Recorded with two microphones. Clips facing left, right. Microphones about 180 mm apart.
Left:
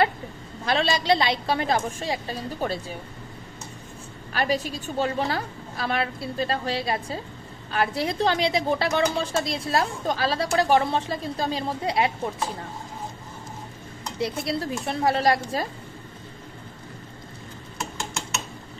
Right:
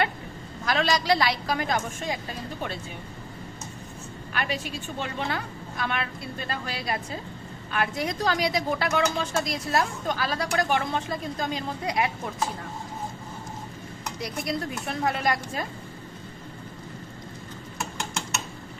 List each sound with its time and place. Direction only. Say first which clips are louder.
0.7 s a woman's voice: left 2 dB; 30° left (ahead or behind)
4.3 s a woman's voice: left 5 dB; 35° left (ahead or behind)
14.2 s a woman's voice: left 4 dB; 30° left (ahead or behind)